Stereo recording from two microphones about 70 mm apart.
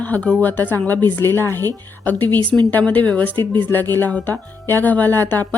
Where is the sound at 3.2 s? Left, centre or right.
Left.